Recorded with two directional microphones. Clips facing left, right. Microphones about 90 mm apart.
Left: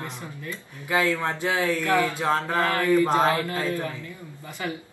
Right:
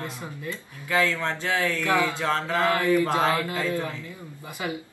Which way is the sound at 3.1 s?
20° left (ahead or behind).